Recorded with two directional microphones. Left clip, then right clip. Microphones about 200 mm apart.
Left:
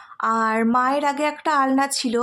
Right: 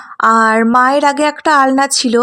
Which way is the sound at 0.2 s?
40° right (ahead or behind).